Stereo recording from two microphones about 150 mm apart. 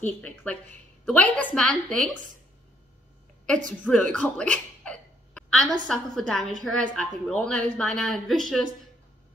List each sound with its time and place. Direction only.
0.0 s a woman's voice: 10° left (ahead or behind)
3.9 s a woman's voice: 5° left (ahead or behind)